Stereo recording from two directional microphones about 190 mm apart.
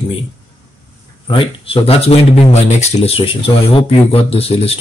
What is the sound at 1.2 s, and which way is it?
Speech, 25° left (ahead or behind).